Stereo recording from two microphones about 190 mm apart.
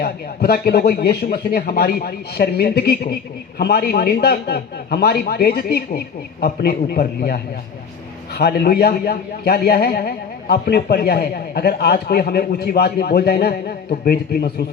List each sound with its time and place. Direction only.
0.0 s a man's voice: 55° left (ahead or behind)